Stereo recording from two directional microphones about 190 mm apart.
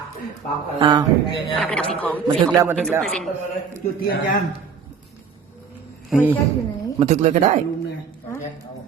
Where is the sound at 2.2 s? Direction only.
15° right (ahead or behind).